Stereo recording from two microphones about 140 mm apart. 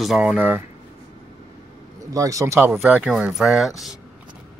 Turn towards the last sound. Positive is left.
turn(degrees=0)  # may be behind; listen again after turning